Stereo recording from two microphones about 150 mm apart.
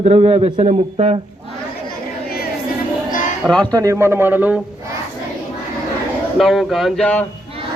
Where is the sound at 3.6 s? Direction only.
25° right (ahead or behind).